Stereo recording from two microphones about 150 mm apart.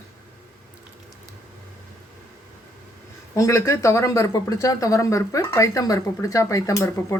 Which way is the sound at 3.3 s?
20° left (ahead or behind).